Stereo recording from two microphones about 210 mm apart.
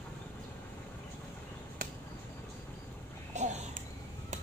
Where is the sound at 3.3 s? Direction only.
35° right (ahead or behind).